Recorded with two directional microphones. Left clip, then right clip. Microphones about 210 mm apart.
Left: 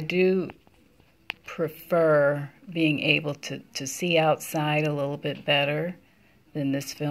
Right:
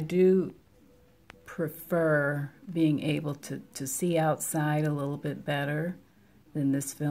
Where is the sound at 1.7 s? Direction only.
15° right (ahead or behind).